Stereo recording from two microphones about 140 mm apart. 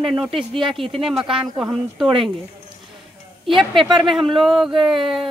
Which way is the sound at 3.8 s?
35° right (ahead or behind).